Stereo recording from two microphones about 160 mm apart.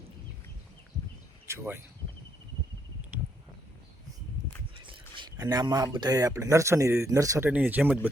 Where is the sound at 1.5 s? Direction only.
15° right (ahead or behind).